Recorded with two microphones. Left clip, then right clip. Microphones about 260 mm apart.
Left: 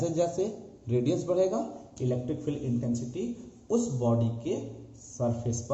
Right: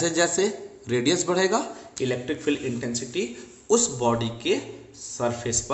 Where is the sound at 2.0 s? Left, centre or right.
Right.